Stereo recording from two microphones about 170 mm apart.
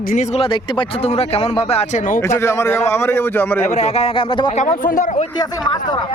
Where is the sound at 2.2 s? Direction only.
15° left (ahead or behind).